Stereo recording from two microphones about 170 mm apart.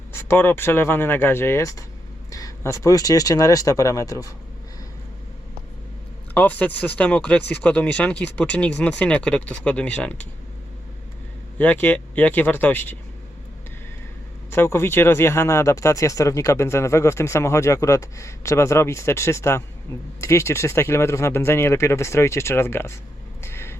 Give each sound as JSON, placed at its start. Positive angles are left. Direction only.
{"t": 0.1, "sound": "speech", "side_deg": 15}
{"t": 6.3, "sound": "speech", "side_deg": 10}
{"t": 11.5, "sound": "speech", "side_deg": 10}
{"t": 14.5, "sound": "speech", "side_deg": 15}
{"t": 23.4, "sound": "a sound", "side_deg": 15}